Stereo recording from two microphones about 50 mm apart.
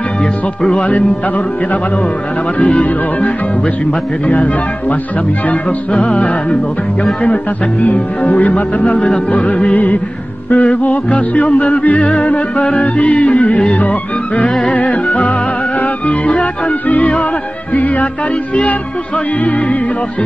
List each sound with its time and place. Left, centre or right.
0.2 s music: centre
0.7 s music: left
2.6 s music: left
4.3 s speech: left
5.5 s music: left
7.8 s music: left
17.7 s speech: left
18.5 s music: left
19.4 s speech: left